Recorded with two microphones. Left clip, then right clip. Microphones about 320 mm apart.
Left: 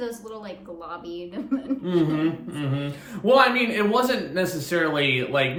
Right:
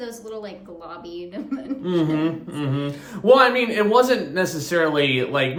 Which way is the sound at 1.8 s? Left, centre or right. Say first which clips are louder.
Right 2 dB; centre.